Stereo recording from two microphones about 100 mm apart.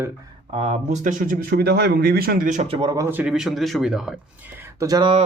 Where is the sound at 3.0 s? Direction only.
20° right (ahead or behind).